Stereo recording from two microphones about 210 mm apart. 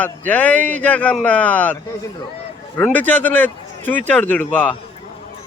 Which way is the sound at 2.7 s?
10° left (ahead or behind).